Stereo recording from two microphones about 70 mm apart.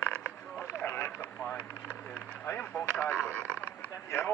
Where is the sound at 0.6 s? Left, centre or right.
Left.